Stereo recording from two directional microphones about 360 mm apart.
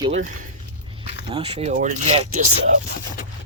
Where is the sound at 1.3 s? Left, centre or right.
Centre.